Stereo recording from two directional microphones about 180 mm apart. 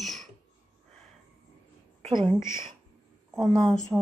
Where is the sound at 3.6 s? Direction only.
5° left (ahead or behind).